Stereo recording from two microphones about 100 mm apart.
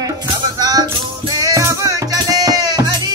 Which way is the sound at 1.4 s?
35° right (ahead or behind).